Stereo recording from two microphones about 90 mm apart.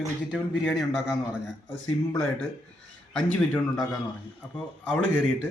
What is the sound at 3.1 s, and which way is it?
Speech, 10° left (ahead or behind).